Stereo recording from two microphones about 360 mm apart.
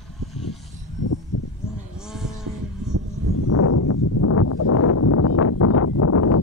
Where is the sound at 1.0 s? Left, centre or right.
Left.